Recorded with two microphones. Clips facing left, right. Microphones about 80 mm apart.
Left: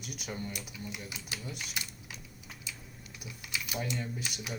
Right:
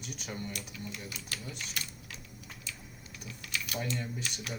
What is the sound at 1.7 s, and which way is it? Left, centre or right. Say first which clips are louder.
Keys jangling: even; centre.